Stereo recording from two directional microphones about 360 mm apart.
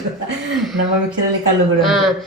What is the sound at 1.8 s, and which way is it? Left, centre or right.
Speech, centre.